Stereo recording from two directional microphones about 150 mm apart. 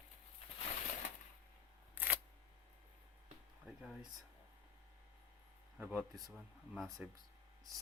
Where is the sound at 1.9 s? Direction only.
10° right (ahead or behind).